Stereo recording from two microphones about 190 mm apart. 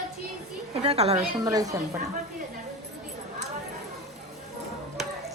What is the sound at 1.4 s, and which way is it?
Speech, 20° right (ahead or behind).